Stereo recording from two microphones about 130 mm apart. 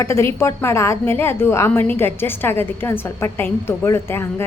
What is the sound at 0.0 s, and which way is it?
A woman's voice, 20° left (ahead or behind).